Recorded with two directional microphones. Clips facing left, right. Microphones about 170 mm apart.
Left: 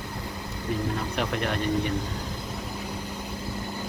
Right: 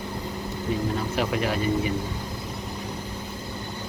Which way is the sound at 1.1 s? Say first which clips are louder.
Right 3 dB; 5° right (ahead or behind).